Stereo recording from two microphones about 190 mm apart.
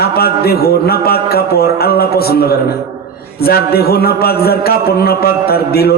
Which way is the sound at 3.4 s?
55° left (ahead or behind).